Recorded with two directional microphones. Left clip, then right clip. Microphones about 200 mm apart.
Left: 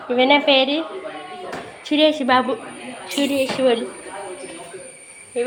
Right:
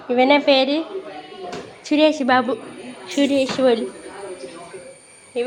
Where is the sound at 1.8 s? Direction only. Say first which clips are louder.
Even; 15° right (ahead or behind).